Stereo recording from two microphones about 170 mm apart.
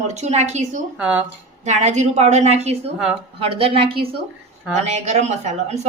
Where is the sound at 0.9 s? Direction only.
5° right (ahead or behind).